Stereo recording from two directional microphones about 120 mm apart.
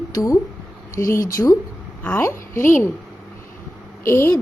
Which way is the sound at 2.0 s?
15° left (ahead or behind).